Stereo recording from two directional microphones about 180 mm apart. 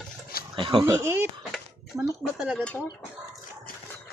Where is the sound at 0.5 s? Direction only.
30° right (ahead or behind).